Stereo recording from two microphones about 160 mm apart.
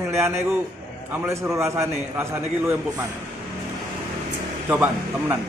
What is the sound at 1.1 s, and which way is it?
A man's voice, 15° right (ahead or behind).